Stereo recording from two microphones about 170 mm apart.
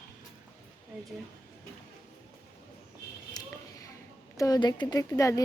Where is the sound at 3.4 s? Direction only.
25° left (ahead or behind).